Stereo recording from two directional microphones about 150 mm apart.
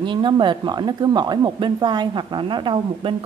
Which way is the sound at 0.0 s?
30° right (ahead or behind).